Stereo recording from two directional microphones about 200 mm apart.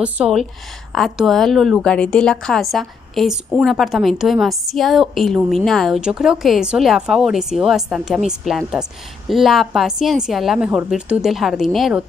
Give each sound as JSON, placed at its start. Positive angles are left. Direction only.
{"t": 0.0, "sound": "a woman's voice", "side_deg": -5}